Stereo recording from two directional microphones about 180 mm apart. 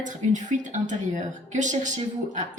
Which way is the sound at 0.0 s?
45° right (ahead or behind).